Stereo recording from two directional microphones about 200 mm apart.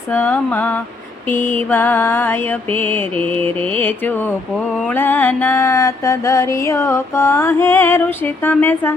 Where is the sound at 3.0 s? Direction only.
30° right (ahead or behind).